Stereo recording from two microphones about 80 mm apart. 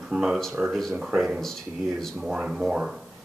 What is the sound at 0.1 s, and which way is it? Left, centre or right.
A man's voice, centre.